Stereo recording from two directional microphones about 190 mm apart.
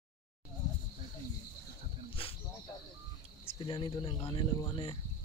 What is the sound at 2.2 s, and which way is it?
Cricket, 30° left (ahead or behind).